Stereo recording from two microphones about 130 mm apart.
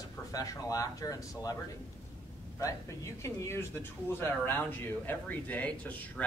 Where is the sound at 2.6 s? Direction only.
25° left (ahead or behind).